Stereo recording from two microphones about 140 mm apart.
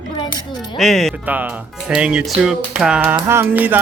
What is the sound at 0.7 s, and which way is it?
Speech, centre (ahead or behind).